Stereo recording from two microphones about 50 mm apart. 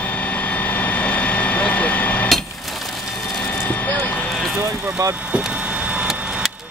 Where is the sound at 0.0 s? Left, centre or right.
Left.